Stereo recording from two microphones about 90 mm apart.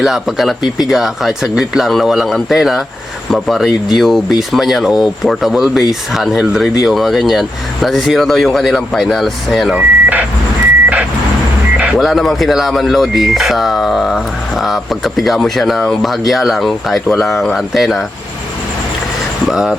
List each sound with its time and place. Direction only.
0.0 s speech: 5° right (ahead or behind)
9.7 s speech: 15° right (ahead or behind)
11.9 s speech: centre (ahead or behind)
19.5 s speech: 5° right (ahead or behind)